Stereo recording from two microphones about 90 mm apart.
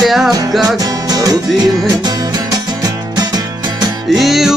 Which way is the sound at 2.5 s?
45° right (ahead or behind).